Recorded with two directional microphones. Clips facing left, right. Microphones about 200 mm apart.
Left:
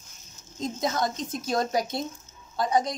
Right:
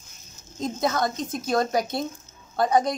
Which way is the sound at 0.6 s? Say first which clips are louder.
Right 3 dB; 60° right (ahead or behind).